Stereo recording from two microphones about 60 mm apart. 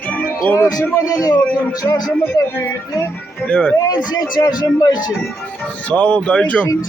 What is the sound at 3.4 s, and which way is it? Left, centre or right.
Speech, left.